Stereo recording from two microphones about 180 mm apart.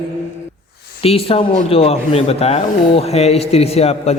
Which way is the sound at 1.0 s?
30° left (ahead or behind).